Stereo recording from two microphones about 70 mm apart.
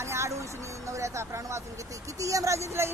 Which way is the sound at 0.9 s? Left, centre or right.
Right.